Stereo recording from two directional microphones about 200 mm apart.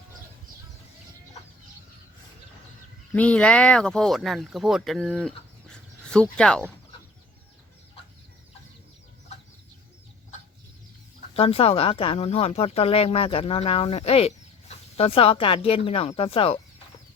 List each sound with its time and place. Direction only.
3.1 s speech: 5° left (ahead or behind)
5.7 s bird: 5° left (ahead or behind)
6.3 s speech: 5° left (ahead or behind)
11.3 s speech: 30° left (ahead or behind)